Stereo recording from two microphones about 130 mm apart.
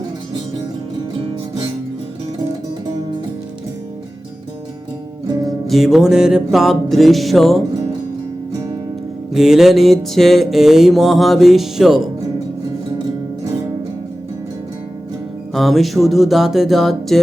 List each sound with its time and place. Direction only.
5.3 s music: 30° right (ahead or behind)
5.6 s music: centre (ahead or behind)
9.3 s music: 5° right (ahead or behind)
15.5 s music: centre (ahead or behind)